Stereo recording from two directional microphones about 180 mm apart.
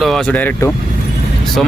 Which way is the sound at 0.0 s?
5° left (ahead or behind).